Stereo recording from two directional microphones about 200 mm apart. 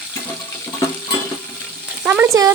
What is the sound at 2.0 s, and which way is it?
Speech, 10° right (ahead or behind).